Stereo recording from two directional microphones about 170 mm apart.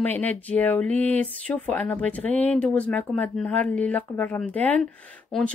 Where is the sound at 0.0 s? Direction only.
10° left (ahead or behind).